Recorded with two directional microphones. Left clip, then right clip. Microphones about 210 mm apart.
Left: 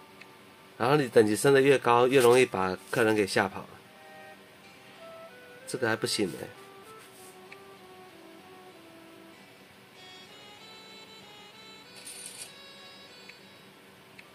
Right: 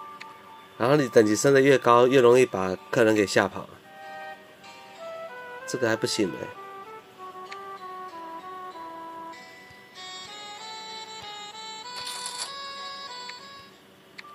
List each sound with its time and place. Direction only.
0.7 s speech: 15° right (ahead or behind)
5.7 s speech: 15° right (ahead or behind)
9.9 s music: centre (ahead or behind)